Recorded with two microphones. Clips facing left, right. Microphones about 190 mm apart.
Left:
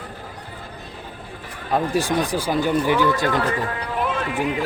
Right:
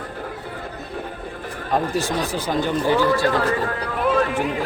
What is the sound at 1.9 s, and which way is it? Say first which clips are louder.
Speech: left 2 dB; 10° left (ahead or behind).